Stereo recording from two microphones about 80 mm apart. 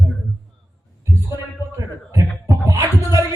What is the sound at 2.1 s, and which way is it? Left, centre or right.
Music, right.